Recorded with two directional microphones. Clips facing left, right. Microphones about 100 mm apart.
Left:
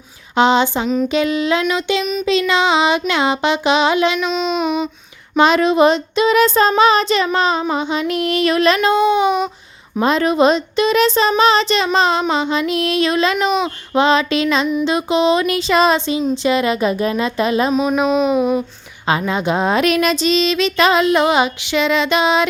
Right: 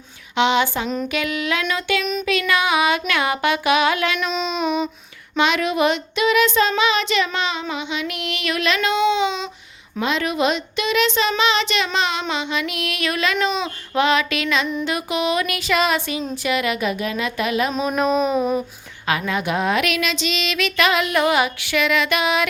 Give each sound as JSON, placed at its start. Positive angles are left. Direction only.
{"t": 0.3, "sound": "speech", "side_deg": 35}
{"t": 4.2, "sound": "child singing", "side_deg": 0}
{"t": 5.4, "sound": "child singing", "side_deg": 35}
{"t": 10.0, "sound": "child singing", "side_deg": 40}
{"t": 13.9, "sound": "speech", "side_deg": 30}
{"t": 16.3, "sound": "child singing", "side_deg": 30}
{"t": 17.7, "sound": "a sound", "side_deg": 5}
{"t": 19.0, "sound": "speech", "side_deg": 30}